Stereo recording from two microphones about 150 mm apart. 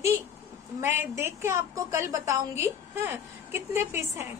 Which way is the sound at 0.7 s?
15° right (ahead or behind).